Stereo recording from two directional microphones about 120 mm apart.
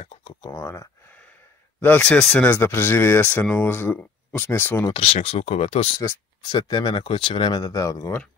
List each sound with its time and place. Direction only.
0.0 s a sound: 50° left (ahead or behind)
0.5 s speech: 25° left (ahead or behind)
1.8 s speech: 10° left (ahead or behind)
4.9 s speech: 55° left (ahead or behind)
6.4 s speech: 40° left (ahead or behind)